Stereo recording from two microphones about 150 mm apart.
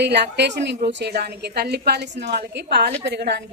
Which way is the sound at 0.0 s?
90° right.